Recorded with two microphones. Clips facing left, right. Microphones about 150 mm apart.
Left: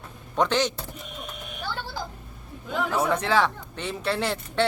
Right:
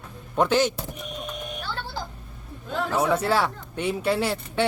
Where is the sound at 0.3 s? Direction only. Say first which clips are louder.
Right 2 dB; 10° right (ahead or behind).